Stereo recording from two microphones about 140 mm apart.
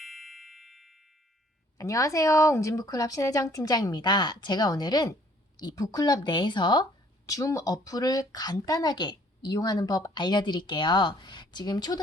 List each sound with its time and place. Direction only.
0.0 s music: centre (ahead or behind)
1.8 s a woman's voice: 25° left (ahead or behind)